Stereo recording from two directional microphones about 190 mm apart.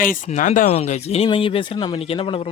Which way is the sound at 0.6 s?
30° left (ahead or behind).